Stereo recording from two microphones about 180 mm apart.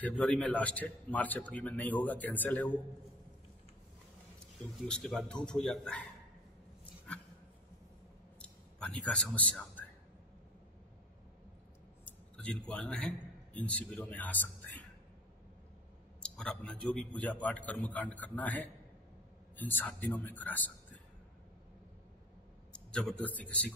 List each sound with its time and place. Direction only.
0.0 s a man's voice: 5° left (ahead or behind)
4.8 s a man's voice: 5° left (ahead or behind)
8.4 s a sound: 5° left (ahead or behind)
12.0 s a man's voice: 5° left (ahead or behind)
16.2 s a man's voice: 5° left (ahead or behind)
22.7 s a man's voice: 5° left (ahead or behind)